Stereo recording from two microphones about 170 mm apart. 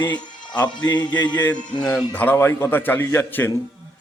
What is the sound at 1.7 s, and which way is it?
Speech, 25° left (ahead or behind).